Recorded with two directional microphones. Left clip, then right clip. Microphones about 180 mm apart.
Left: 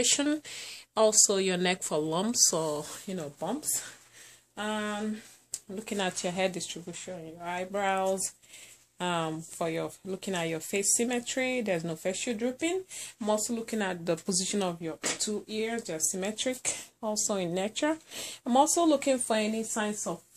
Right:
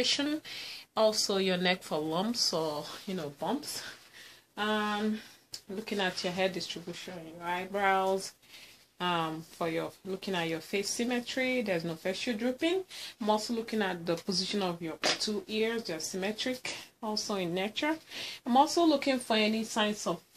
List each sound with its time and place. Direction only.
0.0 s speech: 55° left (ahead or behind)
4.6 s speech: 50° left (ahead or behind)
5.9 s speech: 55° left (ahead or behind); by 19.5 s 35° left (ahead or behind)
19.7 s speech: 15° left (ahead or behind)